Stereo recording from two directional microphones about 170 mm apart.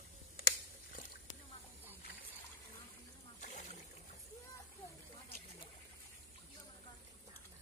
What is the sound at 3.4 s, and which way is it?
Boat, 50° left (ahead or behind).